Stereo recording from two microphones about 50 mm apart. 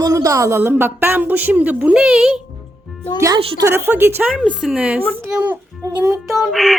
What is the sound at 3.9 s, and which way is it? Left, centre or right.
Speech, right.